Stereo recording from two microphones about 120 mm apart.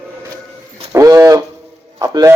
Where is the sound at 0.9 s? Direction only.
25° right (ahead or behind).